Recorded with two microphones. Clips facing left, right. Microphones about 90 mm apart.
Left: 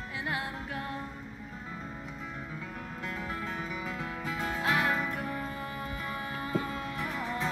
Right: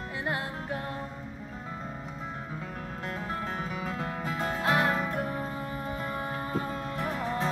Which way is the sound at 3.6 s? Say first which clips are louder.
Right 3 dB; 45° right (ahead or behind).